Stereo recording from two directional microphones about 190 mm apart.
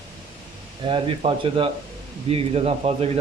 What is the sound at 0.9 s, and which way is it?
Speech, 25° right (ahead or behind).